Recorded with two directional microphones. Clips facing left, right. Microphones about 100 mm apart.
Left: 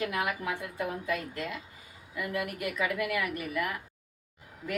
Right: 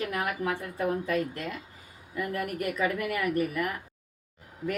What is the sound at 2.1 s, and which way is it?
A woman's voice, 40° right (ahead or behind).